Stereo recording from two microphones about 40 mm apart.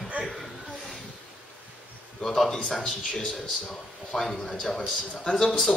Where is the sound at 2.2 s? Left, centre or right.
Centre.